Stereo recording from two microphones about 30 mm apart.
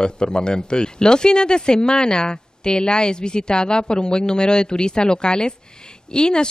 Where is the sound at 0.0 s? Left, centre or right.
Left.